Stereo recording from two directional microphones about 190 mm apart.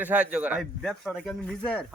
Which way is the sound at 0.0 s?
10° right (ahead or behind).